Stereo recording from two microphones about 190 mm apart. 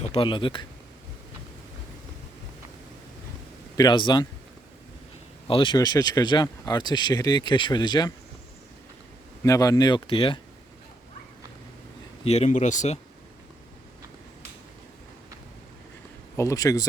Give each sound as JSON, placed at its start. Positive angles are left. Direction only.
{"t": 0.0, "sound": "speech", "side_deg": 30}
{"t": 3.8, "sound": "speech", "side_deg": 25}
{"t": 5.5, "sound": "speech", "side_deg": 25}
{"t": 9.4, "sound": "speech", "side_deg": 15}
{"t": 12.2, "sound": "speech", "side_deg": 35}
{"t": 16.4, "sound": "speech", "side_deg": 15}